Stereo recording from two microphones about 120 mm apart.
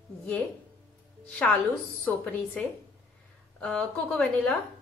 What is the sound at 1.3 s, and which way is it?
Speech, 10° left (ahead or behind).